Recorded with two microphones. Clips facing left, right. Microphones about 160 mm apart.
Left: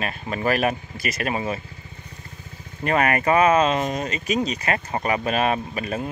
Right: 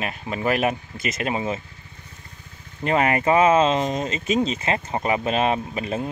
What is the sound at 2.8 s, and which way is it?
Speech, 20° right (ahead or behind).